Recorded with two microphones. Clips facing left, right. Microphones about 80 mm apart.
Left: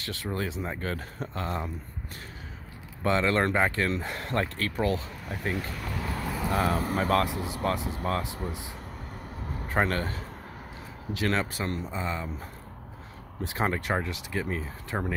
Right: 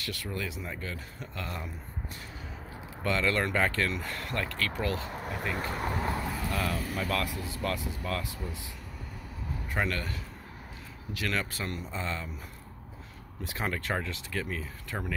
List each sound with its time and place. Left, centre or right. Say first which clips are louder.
0.0 s speech: left 4 dB; left
0.7 s speech: left 6 dB; left
1.3 s speech: left 6 dB; left
3.0 s speech: left 4 dB; left
5.1 s speech: left 1 dB; right
6.5 s speech: left 8 dB; left
7.2 s speech: left 4 dB; left
9.7 s a man's voice: left 5 dB; left; by 12.3 s centre
13.4 s speech: left 5 dB; left